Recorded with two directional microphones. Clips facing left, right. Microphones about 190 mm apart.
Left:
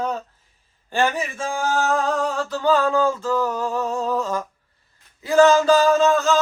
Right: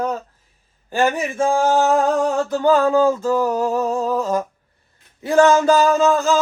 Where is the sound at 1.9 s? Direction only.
20° right (ahead or behind).